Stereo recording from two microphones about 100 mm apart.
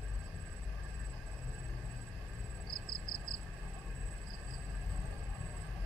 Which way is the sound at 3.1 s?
50° left (ahead or behind).